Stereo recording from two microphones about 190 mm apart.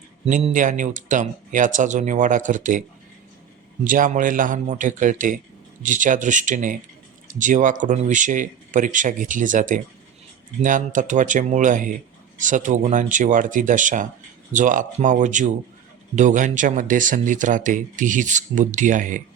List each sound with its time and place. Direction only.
0.3 s speech: 40° right (ahead or behind)
3.8 s speech: 45° right (ahead or behind)